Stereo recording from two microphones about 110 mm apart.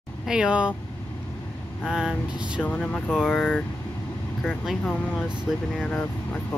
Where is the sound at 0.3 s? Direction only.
10° right (ahead or behind).